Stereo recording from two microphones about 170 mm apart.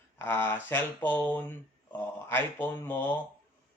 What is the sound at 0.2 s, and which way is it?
Speech, 15° left (ahead or behind).